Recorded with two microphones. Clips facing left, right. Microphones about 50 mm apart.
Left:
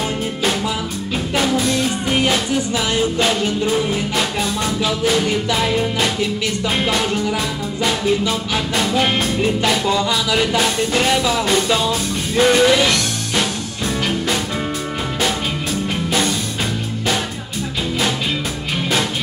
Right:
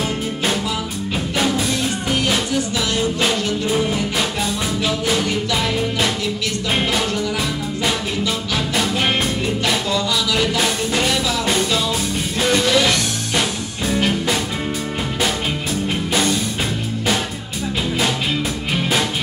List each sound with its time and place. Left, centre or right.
2.0 s music: centre
4.8 s music: centre
7.8 s music: centre
9.8 s music: centre
10.6 s music: centre
12.4 s music: centre
12.8 s music: centre
16.1 s music: centre